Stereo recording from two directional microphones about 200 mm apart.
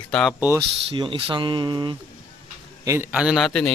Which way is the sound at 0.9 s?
25° right (ahead or behind).